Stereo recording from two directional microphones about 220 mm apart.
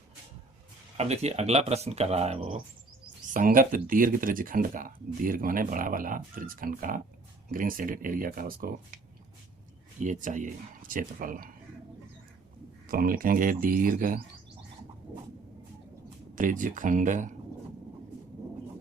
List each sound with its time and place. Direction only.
0.9 s speech: 30° right (ahead or behind)
10.0 s speech: 35° right (ahead or behind)
12.9 s speech: 40° right (ahead or behind)
16.3 s speech: 35° right (ahead or behind)